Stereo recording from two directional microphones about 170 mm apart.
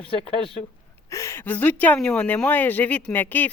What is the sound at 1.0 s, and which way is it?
Speech, 15° left (ahead or behind).